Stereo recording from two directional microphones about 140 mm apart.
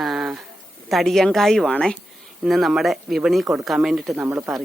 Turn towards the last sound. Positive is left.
turn(degrees=-10)  # may be behind; listen again after turning